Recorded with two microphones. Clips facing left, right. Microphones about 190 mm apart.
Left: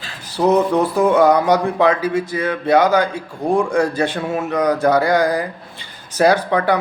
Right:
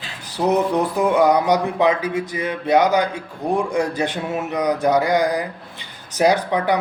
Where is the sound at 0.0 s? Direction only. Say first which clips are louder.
Left 4 dB; 15° right (ahead or behind).